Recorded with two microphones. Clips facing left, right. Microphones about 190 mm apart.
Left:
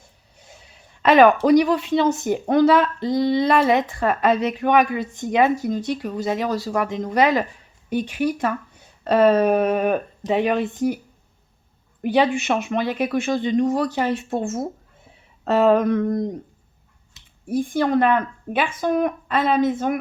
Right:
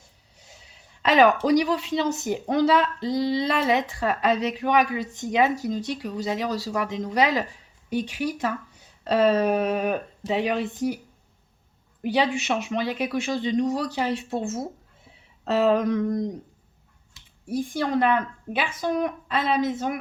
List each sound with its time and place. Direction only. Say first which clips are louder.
0.0 s a sound: left 4 dB; 55° left (ahead or behind)
1.5 s speech: left 5 dB; 55° left (ahead or behind)
12.0 s speech: left 5 dB; 55° left (ahead or behind)
17.4 s speech: left 5 dB; 55° left (ahead or behind)